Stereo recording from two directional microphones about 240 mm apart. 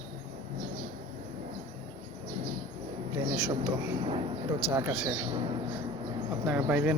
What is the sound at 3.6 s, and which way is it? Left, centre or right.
Speech, right.